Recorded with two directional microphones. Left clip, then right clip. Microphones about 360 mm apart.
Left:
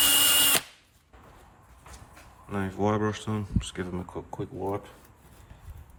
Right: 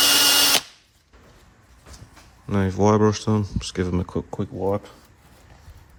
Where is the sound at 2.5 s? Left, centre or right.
Centre.